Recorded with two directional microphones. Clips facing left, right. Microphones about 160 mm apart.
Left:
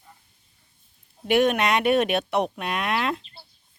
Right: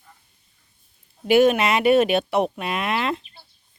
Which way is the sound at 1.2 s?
Centre (ahead or behind).